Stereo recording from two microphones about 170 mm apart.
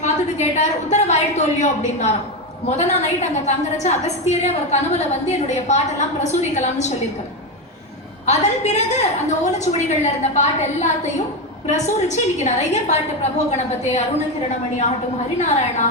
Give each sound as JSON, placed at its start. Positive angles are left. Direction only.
{"t": 0.0, "sound": "a woman's voice", "side_deg": 45}
{"t": 8.3, "sound": "a woman's voice", "side_deg": 40}
{"t": 15.4, "sound": "a woman's voice", "side_deg": 45}